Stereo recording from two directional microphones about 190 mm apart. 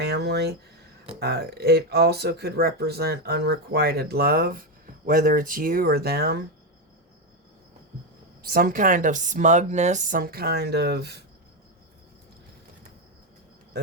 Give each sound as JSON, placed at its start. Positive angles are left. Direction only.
{"t": 0.0, "sound": "speech", "side_deg": -60}
{"t": 8.4, "sound": "speech", "side_deg": -50}